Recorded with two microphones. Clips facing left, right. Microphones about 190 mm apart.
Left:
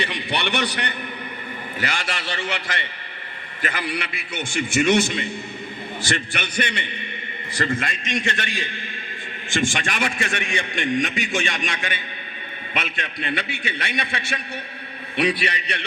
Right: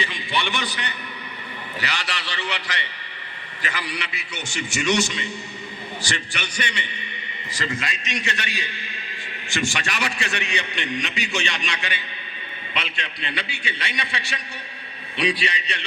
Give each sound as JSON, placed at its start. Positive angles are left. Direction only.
{"t": 0.0, "sound": "a man's voice", "side_deg": 65}
{"t": 1.8, "sound": "a man's voice", "side_deg": 50}